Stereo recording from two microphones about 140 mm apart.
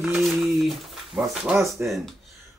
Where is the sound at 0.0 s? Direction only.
5° right (ahead or behind).